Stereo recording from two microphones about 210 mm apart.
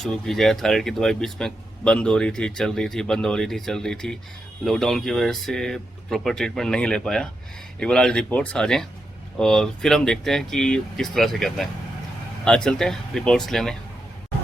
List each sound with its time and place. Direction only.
0.0 s speech: centre (ahead or behind)